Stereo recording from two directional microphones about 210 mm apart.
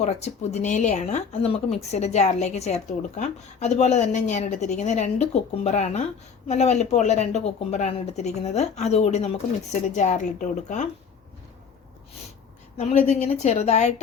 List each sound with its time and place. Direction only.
0.0 s speech: 30° left (ahead or behind)
12.7 s speech: 35° left (ahead or behind)